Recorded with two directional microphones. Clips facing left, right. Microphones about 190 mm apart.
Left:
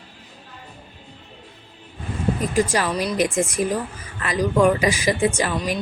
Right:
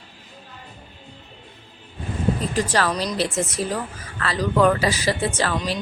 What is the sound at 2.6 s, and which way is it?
Speech, 10° left (ahead or behind).